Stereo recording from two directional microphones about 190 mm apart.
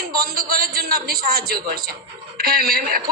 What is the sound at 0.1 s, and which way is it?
A woman's voice, 55° right (ahead or behind).